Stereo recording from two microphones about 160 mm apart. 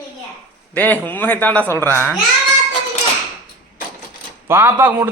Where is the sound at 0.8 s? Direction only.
10° left (ahead or behind).